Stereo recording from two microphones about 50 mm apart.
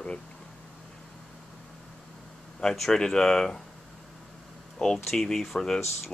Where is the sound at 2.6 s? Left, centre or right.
Centre.